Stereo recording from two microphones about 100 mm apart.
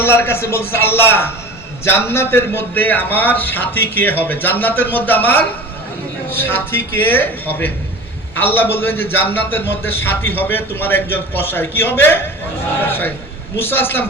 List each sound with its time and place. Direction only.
0.0 s a man's voice: 25° left (ahead or behind)